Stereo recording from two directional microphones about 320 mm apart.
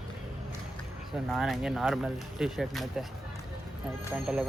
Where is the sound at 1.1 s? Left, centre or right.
Centre.